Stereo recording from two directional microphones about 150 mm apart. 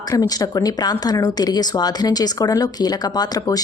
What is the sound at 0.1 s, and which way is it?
A woman's voice, 25° left (ahead or behind).